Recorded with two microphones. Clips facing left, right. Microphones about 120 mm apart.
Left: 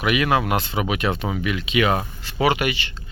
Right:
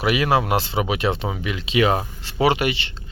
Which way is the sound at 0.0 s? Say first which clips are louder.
Right 1 dB; 30° right (ahead or behind).